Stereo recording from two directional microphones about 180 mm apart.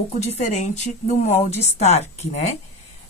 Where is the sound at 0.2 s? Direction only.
40° left (ahead or behind).